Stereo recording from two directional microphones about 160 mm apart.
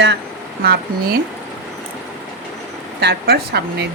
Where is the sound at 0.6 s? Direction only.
80° right.